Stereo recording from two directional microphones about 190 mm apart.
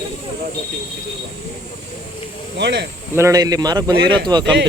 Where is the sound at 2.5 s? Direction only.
65° right (ahead or behind).